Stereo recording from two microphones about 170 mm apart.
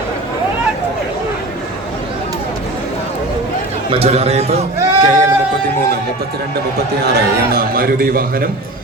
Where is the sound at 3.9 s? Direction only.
35° right (ahead or behind).